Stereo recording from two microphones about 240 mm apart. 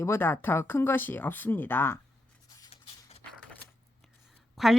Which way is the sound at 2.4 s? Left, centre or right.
Centre.